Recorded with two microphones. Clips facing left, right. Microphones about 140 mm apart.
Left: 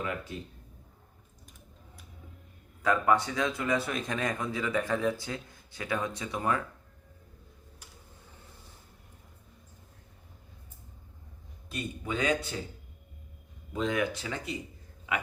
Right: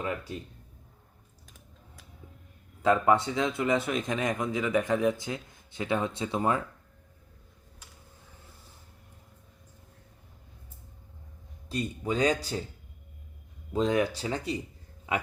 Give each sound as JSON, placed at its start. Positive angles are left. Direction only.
{"t": 2.8, "sound": "speech", "side_deg": -25}
{"t": 11.7, "sound": "speech", "side_deg": -35}
{"t": 13.7, "sound": "speech", "side_deg": -35}